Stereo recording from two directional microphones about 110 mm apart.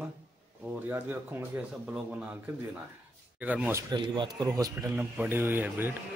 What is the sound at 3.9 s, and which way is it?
Speech, 45° right (ahead or behind).